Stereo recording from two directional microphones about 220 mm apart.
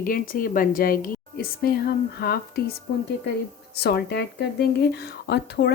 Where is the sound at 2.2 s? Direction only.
45° left (ahead or behind).